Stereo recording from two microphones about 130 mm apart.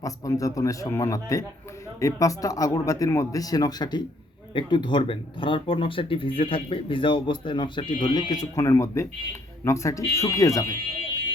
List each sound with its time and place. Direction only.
0.0 s speech: 25° left (ahead or behind)